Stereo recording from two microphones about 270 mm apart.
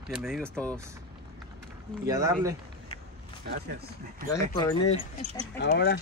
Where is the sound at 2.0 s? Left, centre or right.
Centre.